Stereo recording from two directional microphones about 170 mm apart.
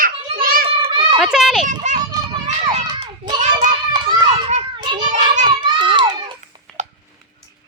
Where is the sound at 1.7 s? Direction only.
45° right (ahead or behind).